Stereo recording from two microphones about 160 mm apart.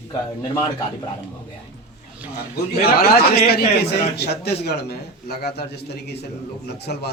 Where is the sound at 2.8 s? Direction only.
75° left (ahead or behind).